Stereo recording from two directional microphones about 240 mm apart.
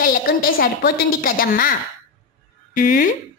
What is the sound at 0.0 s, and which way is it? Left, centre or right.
Speech, left.